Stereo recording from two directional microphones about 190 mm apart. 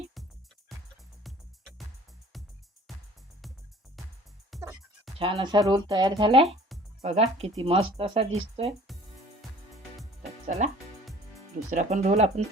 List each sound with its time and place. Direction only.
2.3 s music: centre (ahead or behind)
4.5 s music: centre (ahead or behind)
5.2 s speech: 25° right (ahead or behind)
10.4 s speech: 35° right (ahead or behind)
11.7 s speech: 40° right (ahead or behind)